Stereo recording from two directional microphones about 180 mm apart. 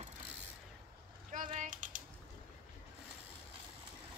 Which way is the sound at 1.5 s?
45° right (ahead or behind).